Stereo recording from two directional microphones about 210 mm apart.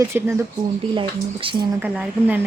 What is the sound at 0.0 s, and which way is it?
Speech, 10° right (ahead or behind).